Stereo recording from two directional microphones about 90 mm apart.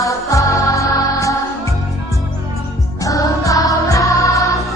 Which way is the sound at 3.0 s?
40° left (ahead or behind).